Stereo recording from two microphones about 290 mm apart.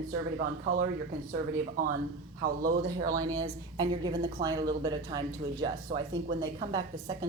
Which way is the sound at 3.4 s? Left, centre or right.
Centre.